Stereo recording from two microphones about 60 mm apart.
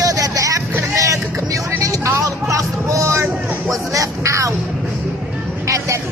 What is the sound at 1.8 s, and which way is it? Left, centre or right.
Music, right.